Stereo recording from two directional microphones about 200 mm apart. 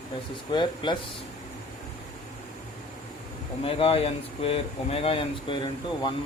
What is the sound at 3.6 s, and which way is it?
Speech, 30° left (ahead or behind).